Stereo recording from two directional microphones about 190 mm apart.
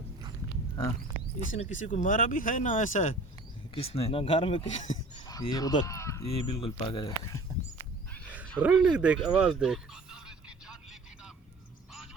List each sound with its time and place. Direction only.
1.5 s speech: 40° left (ahead or behind)
3.8 s speech: 30° left (ahead or behind)
4.9 s a sound: 20° left (ahead or behind)
6.2 s speech: 30° left (ahead or behind)
7.2 s speech: 15° left (ahead or behind)
8.1 s wild animals: 5° left (ahead or behind)
8.6 s speech: 5° right (ahead or behind)
9.0 s a sound: 5° right (ahead or behind)